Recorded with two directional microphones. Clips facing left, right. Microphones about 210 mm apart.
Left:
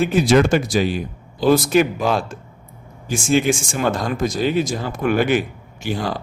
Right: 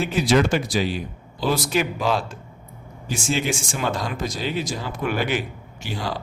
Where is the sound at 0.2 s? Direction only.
50° left (ahead or behind).